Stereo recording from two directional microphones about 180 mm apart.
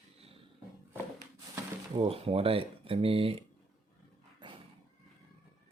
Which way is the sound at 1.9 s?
30° right (ahead or behind).